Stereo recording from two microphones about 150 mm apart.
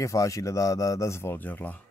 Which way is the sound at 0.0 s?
20° left (ahead or behind).